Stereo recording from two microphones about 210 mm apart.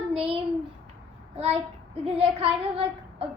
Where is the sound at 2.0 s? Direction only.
30° right (ahead or behind).